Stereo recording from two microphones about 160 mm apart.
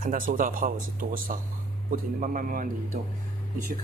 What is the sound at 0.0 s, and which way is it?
A man's voice, 60° right (ahead or behind).